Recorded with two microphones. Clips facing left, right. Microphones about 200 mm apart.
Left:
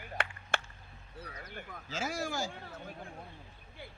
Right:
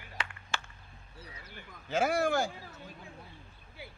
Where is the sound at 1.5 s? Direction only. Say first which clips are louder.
Left 7 dB; 55° left (ahead or behind).